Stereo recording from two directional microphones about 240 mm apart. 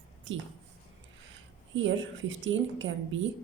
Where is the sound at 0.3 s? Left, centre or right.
Right.